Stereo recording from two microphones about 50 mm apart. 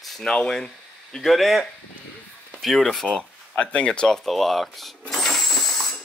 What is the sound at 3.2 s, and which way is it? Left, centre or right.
Speech, left.